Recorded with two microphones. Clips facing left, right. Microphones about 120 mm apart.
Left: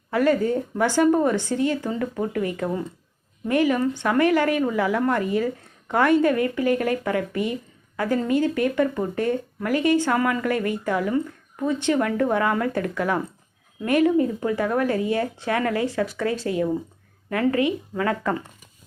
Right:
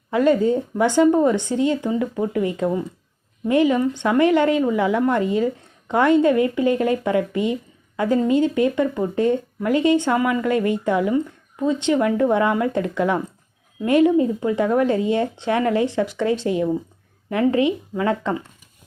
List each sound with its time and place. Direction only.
0.1 s speech: 20° right (ahead or behind)